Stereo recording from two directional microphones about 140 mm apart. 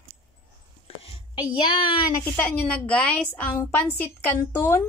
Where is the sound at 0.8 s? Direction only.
45° left (ahead or behind).